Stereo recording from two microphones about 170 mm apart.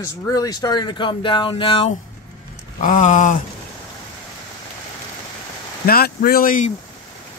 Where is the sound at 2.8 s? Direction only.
50° left (ahead or behind).